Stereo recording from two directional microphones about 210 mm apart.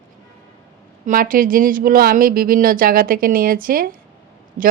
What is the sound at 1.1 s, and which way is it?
Speech, 40° right (ahead or behind).